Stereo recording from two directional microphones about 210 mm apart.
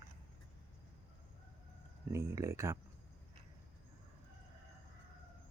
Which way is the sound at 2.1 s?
15° right (ahead or behind).